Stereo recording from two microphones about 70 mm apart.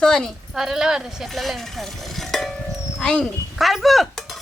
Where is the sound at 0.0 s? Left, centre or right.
Centre.